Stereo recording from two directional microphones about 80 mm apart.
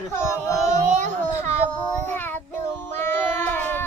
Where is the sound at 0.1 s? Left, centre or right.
Left.